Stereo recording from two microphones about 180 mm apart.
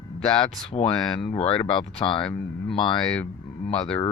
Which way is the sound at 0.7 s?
30° left (ahead or behind).